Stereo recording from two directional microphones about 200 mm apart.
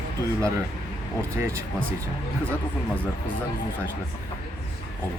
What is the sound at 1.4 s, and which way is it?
Speech, 15° right (ahead or behind).